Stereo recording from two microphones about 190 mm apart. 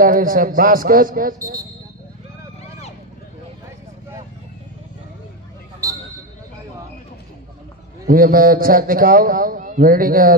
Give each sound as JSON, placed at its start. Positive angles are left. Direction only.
{"t": 0.0, "sound": "a man's voice", "side_deg": -50}
{"t": 1.4, "sound": "speech", "side_deg": -15}
{"t": 5.8, "sound": "basketball bounce", "side_deg": -15}
{"t": 8.1, "sound": "a man's voice", "side_deg": -50}